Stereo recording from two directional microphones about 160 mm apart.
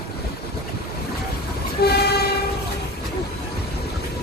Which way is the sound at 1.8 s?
90° left.